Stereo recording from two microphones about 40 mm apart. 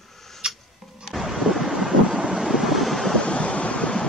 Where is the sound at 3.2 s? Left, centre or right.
Left.